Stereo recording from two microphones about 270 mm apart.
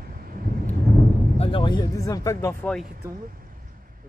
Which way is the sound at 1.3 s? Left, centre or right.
Centre.